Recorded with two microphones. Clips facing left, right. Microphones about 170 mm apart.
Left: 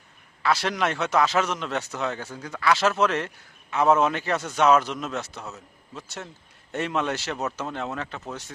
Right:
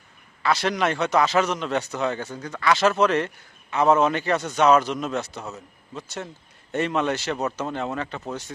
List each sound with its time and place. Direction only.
0.4 s a man's voice: centre (ahead or behind)